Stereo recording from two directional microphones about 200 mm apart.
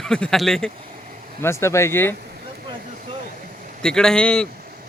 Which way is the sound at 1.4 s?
15° left (ahead or behind).